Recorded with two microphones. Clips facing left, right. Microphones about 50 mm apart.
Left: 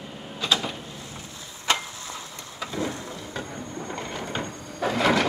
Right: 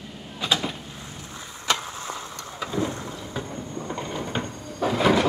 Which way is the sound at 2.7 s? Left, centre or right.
Right.